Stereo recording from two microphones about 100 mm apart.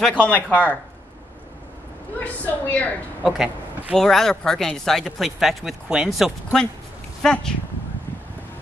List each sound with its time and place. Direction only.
0.1 s a woman's voice: 15° left (ahead or behind)
2.1 s a woman's voice: 15° left (ahead or behind)
3.3 s speech: 5° right (ahead or behind)